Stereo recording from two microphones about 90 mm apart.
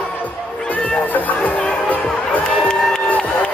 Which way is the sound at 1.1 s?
15° left (ahead or behind).